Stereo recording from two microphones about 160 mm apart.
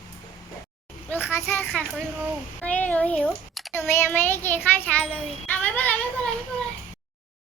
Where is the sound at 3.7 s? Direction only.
15° left (ahead or behind).